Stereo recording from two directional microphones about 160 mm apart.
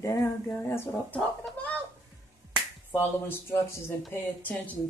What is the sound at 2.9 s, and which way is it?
Speech, 15° left (ahead or behind).